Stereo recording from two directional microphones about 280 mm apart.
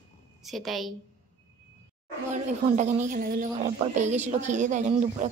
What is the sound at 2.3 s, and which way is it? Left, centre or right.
A woman's voice, right.